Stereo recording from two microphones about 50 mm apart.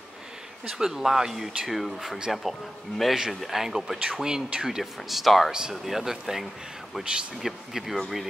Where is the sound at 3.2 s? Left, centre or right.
Centre.